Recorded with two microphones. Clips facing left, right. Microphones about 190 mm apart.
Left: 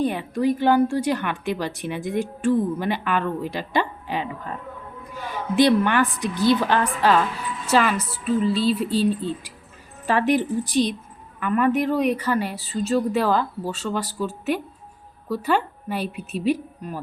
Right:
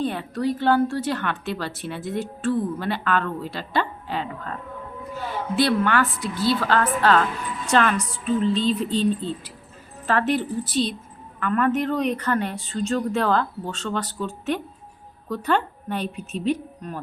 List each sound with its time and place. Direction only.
0.0 s a woman's voice: 15° left (ahead or behind)